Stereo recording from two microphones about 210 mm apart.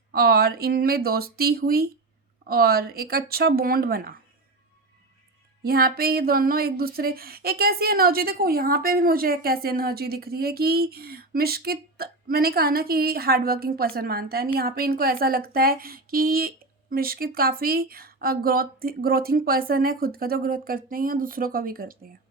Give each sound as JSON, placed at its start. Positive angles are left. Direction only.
{"t": 0.1, "sound": "speech", "side_deg": -45}
{"t": 5.6, "sound": "speech", "side_deg": -45}